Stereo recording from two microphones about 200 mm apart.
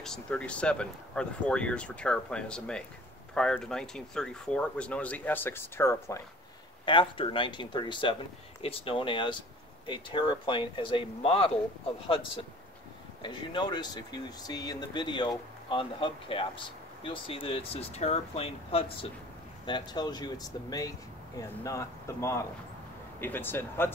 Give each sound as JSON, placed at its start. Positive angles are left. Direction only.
{"t": 0.0, "sound": "speech", "side_deg": 5}
{"t": 6.9, "sound": "speech", "side_deg": 25}
{"t": 13.2, "sound": "speech", "side_deg": 25}